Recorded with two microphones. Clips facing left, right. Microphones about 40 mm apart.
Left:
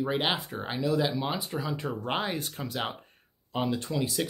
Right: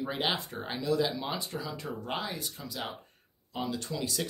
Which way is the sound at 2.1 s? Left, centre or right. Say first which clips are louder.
Left 5 dB; left.